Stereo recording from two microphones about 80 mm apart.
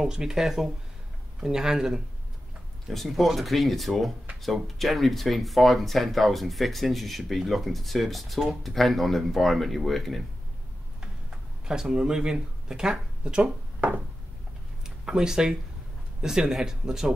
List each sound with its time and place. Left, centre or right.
0.0 s speech: centre
11.0 s tick-tock: centre
15.0 s speech: centre